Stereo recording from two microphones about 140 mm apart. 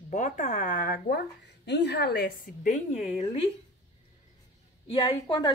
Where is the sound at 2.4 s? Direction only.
70° left (ahead or behind); by 3.2 s 50° left (ahead or behind).